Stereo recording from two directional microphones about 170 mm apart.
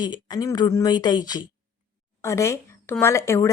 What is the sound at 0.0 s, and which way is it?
Speech, 25° left (ahead or behind).